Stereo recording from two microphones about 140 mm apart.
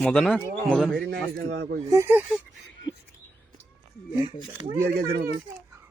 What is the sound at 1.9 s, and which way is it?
Speech, 20° right (ahead or behind).